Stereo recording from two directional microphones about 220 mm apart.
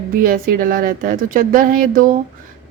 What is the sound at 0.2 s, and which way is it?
Speech, 40° right (ahead or behind).